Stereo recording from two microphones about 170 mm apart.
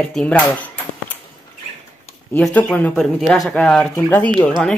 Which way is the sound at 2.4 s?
5° left (ahead or behind).